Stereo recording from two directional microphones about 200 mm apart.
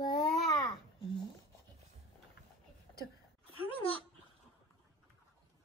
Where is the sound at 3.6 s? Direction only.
25° left (ahead or behind).